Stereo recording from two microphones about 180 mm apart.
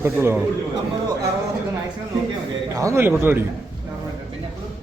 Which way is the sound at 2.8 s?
15° right (ahead or behind).